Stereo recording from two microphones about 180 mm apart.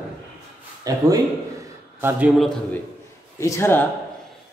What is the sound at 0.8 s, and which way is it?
A man's voice, 20° right (ahead or behind).